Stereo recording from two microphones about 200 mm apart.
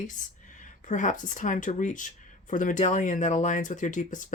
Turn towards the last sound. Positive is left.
turn(degrees=40)  # may be behind; listen again after turning